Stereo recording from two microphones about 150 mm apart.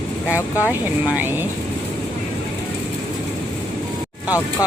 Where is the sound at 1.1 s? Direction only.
15° right (ahead or behind).